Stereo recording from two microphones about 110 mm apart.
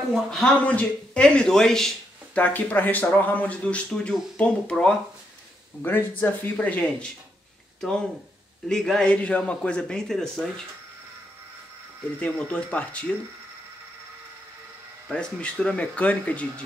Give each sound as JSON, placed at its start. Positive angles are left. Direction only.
{"t": 0.1, "sound": "a man's voice", "side_deg": 5}
{"t": 8.6, "sound": "a man's voice", "side_deg": 5}
{"t": 12.2, "sound": "a man's voice", "side_deg": 10}
{"t": 15.0, "sound": "a man's voice", "side_deg": 10}